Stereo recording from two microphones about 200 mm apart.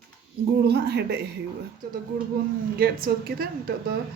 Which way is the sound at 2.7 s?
50° right (ahead or behind).